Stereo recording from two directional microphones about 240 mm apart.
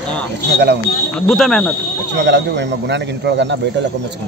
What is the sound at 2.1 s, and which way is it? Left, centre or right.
Speech, right.